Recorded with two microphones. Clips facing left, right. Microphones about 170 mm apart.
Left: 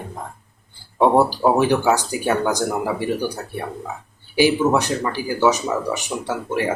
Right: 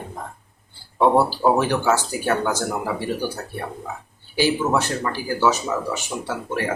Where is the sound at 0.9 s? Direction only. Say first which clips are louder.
Left 2 dB; 15° left (ahead or behind).